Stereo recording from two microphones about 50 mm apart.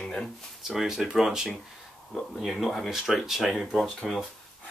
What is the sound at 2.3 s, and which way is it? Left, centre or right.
Speech, centre.